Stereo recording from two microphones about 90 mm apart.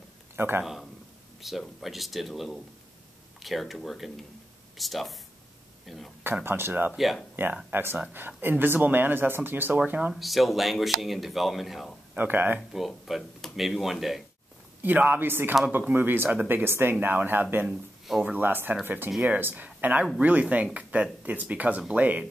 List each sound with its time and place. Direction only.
0.4 s speech: 25° right (ahead or behind)
1.6 s speech: centre (ahead or behind)
6.2 s speech: 25° right (ahead or behind)
6.9 s speech: centre (ahead or behind)
7.4 s speech: 20° right (ahead or behind)
10.1 s speech: centre (ahead or behind)
12.1 s speech: 20° right (ahead or behind)
12.5 s speech: centre (ahead or behind)
14.8 s speech: 20° right (ahead or behind)
17.6 s speech: 5° right (ahead or behind)
18.3 s speech: 20° right (ahead or behind)